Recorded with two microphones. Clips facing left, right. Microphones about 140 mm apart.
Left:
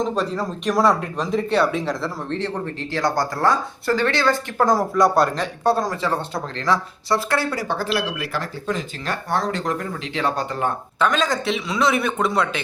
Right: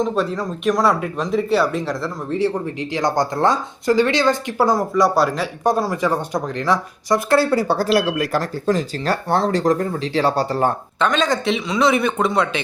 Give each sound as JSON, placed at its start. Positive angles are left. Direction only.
{"t": 0.0, "sound": "speech", "side_deg": 0}
{"t": 2.9, "sound": "speech", "side_deg": -20}
{"t": 4.6, "sound": "speech", "side_deg": 0}
{"t": 7.3, "sound": "speech", "side_deg": -35}
{"t": 11.0, "sound": "speech", "side_deg": 0}